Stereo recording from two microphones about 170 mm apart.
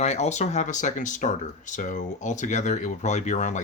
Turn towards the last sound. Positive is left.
turn(degrees=45)  # may be behind; listen again after turning